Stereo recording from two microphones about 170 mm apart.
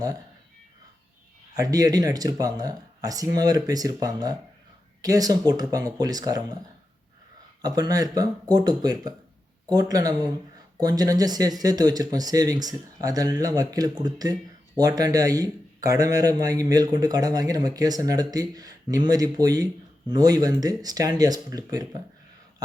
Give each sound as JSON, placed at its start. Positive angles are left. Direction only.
{"t": 1.5, "sound": "a man's voice", "side_deg": -20}
{"t": 7.6, "sound": "a man's voice", "side_deg": -20}